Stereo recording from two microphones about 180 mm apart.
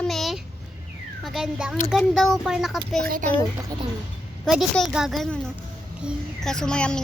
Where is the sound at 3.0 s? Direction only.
55° right (ahead or behind).